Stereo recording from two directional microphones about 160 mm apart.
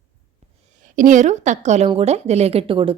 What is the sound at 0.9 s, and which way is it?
A woman's voice, 55° right (ahead or behind).